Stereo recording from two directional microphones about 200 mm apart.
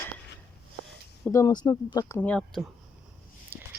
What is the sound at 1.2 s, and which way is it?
Speech, 15° left (ahead or behind).